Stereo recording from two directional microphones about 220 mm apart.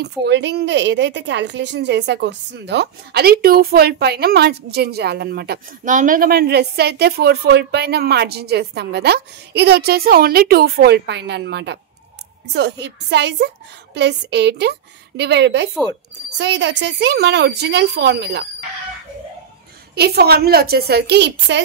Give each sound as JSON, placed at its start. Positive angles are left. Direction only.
{"t": 0.0, "sound": "a woman's voice", "side_deg": -50}
{"t": 20.0, "sound": "a woman's voice", "side_deg": -45}